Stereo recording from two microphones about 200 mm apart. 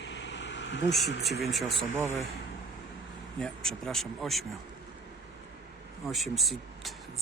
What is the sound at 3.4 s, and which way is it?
Speech, 5° left (ahead or behind).